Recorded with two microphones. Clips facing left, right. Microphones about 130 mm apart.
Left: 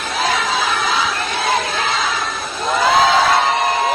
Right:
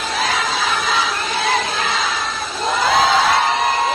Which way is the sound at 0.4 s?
55° left (ahead or behind).